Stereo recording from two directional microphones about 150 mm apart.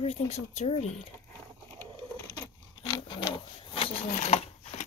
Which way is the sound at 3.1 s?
30° left (ahead or behind).